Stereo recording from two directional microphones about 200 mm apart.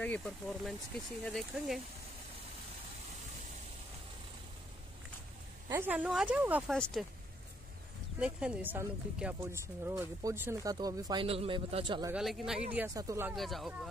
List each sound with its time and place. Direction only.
0.0 s speech: 5° left (ahead or behind)
5.7 s speech: 10° right (ahead or behind)
8.2 s speech: 5° right (ahead or behind); by 12.1 s 25° right (ahead or behind)
12.1 s speech: centre (ahead or behind)
13.4 s speech: centre (ahead or behind)